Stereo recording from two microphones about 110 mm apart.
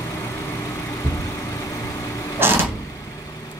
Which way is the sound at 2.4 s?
20° right (ahead or behind).